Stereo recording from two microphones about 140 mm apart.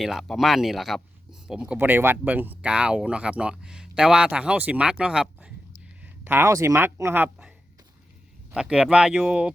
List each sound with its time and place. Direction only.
0.0 s speech: centre (ahead or behind)
8.5 s speech: 5° right (ahead or behind)